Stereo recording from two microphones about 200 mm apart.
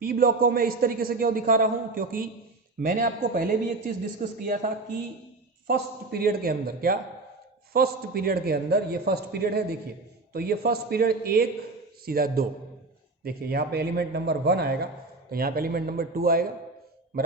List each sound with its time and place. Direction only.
0.0 s a man's voice: 45° right (ahead or behind)
5.6 s a man's voice: 50° right (ahead or behind)